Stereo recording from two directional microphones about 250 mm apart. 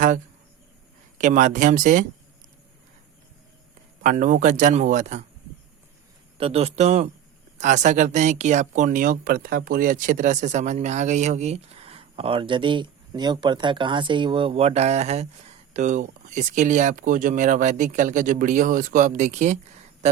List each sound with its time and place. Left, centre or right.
1.2 s speech: right
4.0 s speech: right
6.3 s speech: right